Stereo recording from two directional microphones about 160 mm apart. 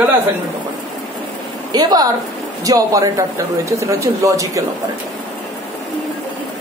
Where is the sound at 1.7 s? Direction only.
25° right (ahead or behind).